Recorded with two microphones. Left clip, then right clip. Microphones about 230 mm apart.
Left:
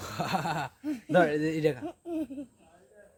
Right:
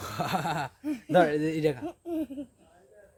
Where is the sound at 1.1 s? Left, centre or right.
Centre.